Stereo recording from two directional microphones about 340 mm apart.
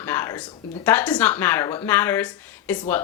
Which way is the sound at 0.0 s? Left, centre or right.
Centre.